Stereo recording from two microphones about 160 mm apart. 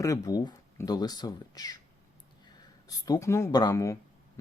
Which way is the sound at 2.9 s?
20° left (ahead or behind).